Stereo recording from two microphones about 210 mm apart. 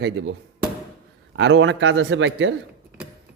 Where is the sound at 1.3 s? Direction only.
60° right (ahead or behind).